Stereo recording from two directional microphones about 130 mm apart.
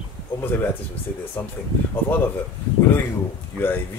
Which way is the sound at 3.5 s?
15° left (ahead or behind).